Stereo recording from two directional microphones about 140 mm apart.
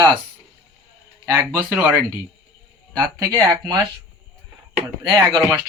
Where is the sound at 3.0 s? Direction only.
25° right (ahead or behind).